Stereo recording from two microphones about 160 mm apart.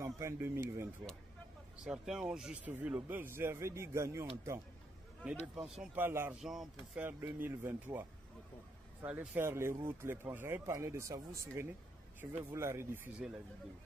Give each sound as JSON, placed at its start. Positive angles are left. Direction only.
{"t": 0.0, "sound": "speech", "side_deg": -20}
{"t": 1.9, "sound": "speech", "side_deg": -5}
{"t": 5.6, "sound": "speech", "side_deg": -10}
{"t": 6.4, "sound": "speech", "side_deg": 0}
{"t": 7.1, "sound": "speech", "side_deg": -15}